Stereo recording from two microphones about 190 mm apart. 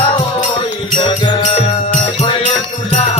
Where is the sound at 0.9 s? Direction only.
20° left (ahead or behind).